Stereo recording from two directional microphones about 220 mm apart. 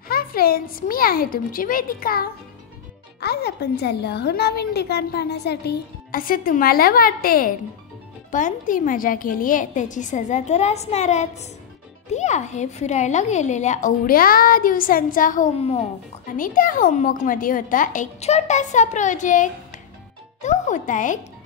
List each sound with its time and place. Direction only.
0.1 s a child's voice: 40° left (ahead or behind)